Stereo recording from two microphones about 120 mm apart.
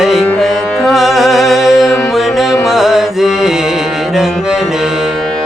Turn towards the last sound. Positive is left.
turn(degrees=0)  # may be behind; listen again after turning